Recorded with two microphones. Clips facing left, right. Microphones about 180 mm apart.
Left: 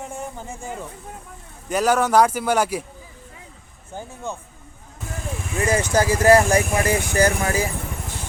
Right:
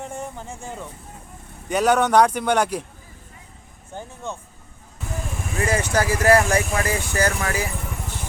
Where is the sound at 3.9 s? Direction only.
5° left (ahead or behind).